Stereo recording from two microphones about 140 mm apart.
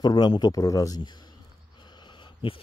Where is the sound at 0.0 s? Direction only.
35° left (ahead or behind).